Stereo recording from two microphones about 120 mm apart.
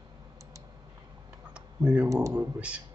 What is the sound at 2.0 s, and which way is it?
Speech, 25° right (ahead or behind).